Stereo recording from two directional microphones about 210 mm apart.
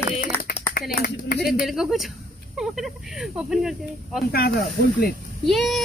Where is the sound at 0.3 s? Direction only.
10° left (ahead or behind).